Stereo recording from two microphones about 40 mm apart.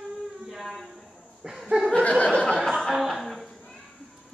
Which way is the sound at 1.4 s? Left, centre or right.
Right.